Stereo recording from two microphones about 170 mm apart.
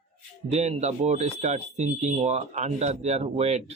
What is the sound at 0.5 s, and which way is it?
Speech, 40° right (ahead or behind).